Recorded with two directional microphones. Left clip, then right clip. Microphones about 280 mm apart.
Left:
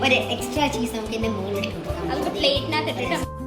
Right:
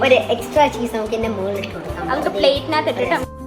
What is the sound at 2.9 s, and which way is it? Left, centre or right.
Speech, centre.